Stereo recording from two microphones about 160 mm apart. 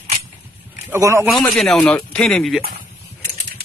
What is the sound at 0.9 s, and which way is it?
Speech, 15° right (ahead or behind).